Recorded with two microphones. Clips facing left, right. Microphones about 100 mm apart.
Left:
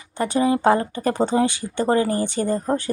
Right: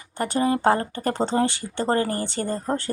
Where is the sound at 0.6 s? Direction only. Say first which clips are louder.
Left 3 dB; 20° left (ahead or behind).